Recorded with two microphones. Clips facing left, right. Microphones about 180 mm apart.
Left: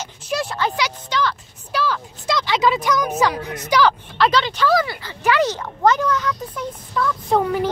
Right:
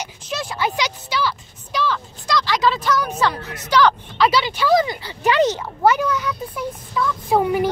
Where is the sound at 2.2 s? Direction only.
20° left (ahead or behind).